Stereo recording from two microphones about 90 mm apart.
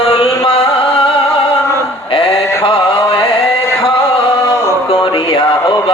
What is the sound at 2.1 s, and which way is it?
Mantra, 85° left.